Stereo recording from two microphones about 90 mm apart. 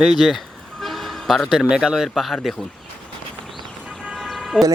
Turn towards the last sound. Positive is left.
turn(degrees=0)  # may be behind; listen again after turning